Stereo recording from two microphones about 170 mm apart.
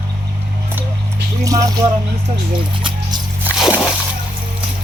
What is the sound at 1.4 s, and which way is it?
Speech, 20° right (ahead or behind).